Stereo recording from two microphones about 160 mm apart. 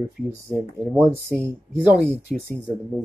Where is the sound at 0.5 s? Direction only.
Centre (ahead or behind).